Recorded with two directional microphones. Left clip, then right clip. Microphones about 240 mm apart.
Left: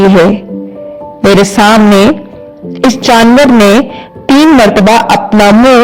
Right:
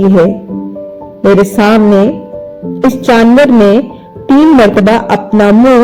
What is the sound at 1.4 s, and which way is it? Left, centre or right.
Speech, left.